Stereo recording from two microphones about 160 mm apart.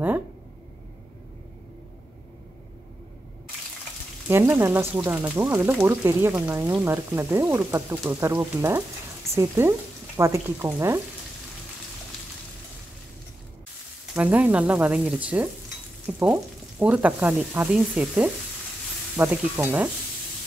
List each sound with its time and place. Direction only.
4.3 s speech: 15° right (ahead or behind)
14.1 s speech: 10° right (ahead or behind)
16.1 s frying: 5° right (ahead or behind)
16.8 s speech: 10° right (ahead or behind)